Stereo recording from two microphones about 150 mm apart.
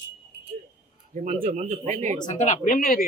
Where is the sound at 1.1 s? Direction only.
55° right (ahead or behind).